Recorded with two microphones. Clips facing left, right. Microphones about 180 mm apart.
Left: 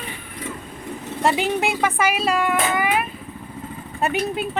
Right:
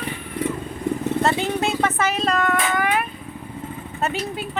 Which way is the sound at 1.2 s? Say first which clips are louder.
Left 4 dB; 15° left (ahead or behind).